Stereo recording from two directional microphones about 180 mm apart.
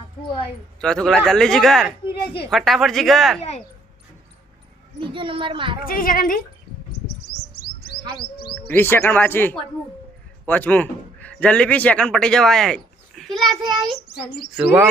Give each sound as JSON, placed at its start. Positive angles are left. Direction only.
{"t": 0.8, "sound": "a man's voice", "side_deg": 5}
{"t": 4.9, "sound": "a woman's voice", "side_deg": -30}
{"t": 5.9, "sound": "speech", "side_deg": 50}
{"t": 8.5, "sound": "a man's voice", "side_deg": 10}
{"t": 13.6, "sound": "a woman's voice", "side_deg": -25}
{"t": 14.5, "sound": "chirp", "side_deg": -10}